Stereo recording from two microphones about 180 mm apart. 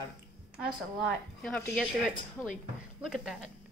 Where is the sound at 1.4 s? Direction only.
5° left (ahead or behind).